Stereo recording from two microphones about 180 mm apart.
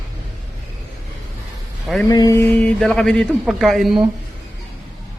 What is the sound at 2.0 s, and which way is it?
Mantra, 20° left (ahead or behind).